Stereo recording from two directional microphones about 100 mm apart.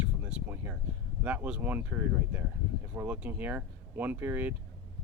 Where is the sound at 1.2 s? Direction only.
15° right (ahead or behind).